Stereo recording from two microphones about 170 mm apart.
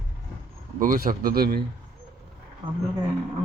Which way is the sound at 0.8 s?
55° right (ahead or behind).